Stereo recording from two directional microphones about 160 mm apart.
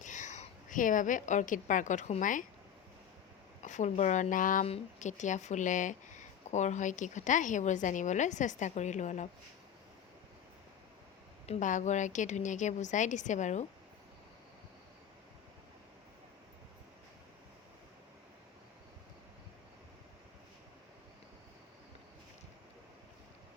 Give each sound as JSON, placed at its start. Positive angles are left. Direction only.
{"t": 0.0, "sound": "a woman's voice", "side_deg": 50}
{"t": 3.6, "sound": "speech", "side_deg": 50}
{"t": 4.6, "sound": "speech", "side_deg": 45}
{"t": 11.4, "sound": "speech", "side_deg": 45}